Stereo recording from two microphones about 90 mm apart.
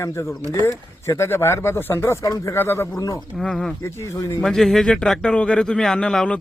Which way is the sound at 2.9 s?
35° left (ahead or behind).